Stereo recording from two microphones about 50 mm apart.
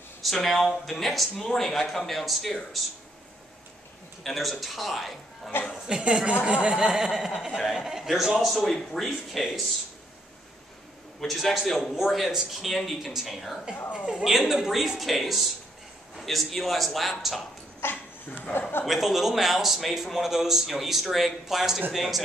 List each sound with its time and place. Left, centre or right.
0.2 s a man's voice: centre
4.2 s a man's voice: centre
5.5 s a woman's voice: left
5.9 s speech: centre
8.6 s a man's voice: centre
11.1 s a man's voice: centre
17.8 s a woman's voice: left
18.9 s a man's voice: centre